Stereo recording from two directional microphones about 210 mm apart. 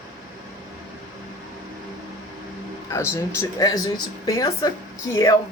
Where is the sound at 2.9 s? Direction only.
15° left (ahead or behind).